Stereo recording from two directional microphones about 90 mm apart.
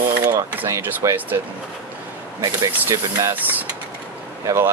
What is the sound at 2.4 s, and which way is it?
Speech, 40° right (ahead or behind).